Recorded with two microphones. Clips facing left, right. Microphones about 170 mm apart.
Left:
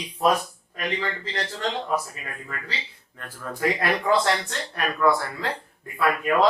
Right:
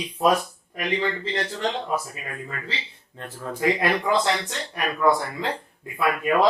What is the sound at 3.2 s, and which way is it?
Speech, 25° right (ahead or behind).